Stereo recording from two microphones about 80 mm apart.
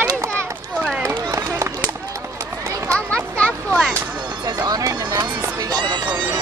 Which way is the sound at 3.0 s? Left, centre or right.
Centre.